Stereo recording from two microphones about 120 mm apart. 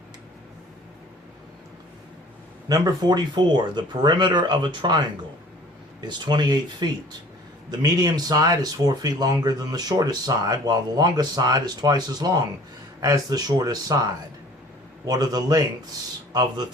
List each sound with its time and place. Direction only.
2.6 s speech: 30° right (ahead or behind)